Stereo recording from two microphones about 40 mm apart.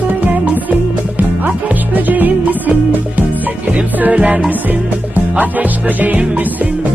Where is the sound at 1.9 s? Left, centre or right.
Right.